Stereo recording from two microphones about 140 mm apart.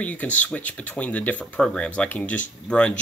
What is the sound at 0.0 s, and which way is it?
Speech, 10° left (ahead or behind).